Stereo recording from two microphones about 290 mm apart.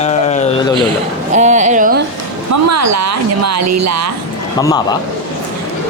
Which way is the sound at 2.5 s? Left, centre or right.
Right.